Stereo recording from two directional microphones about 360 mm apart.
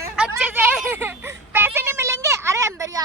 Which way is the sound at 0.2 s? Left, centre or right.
Centre.